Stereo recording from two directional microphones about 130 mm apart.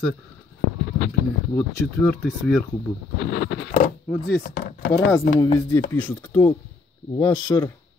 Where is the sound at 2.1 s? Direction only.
10° left (ahead or behind).